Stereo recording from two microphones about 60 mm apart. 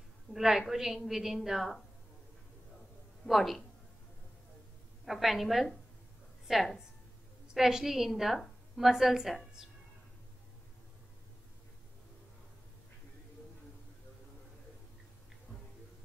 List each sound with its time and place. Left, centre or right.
0.3 s a woman's voice: centre
3.3 s a woman's voice: centre
5.0 s a woman's voice: centre